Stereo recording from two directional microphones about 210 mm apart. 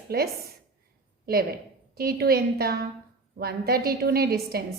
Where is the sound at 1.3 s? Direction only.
45° right (ahead or behind).